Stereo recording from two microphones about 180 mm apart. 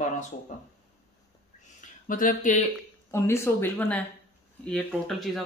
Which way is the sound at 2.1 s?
50° left (ahead or behind).